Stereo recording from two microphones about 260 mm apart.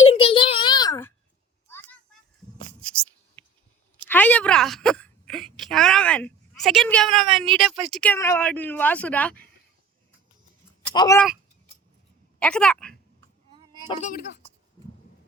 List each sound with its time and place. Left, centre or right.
0.1 s a sound: left
3.4 s scissors: centre
4.0 s a woman's voice: centre
10.9 s speech: centre
12.4 s speech: centre
13.8 s speech: left
14.2 s a woman's voice: left